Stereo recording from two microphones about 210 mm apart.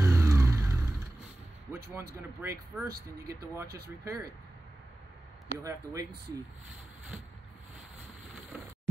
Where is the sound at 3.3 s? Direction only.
15° right (ahead or behind).